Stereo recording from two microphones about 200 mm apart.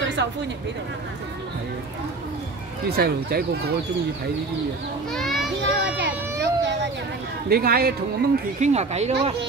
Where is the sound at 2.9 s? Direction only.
50° right (ahead or behind).